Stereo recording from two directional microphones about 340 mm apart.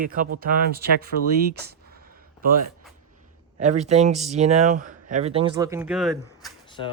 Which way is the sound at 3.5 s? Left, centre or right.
Right.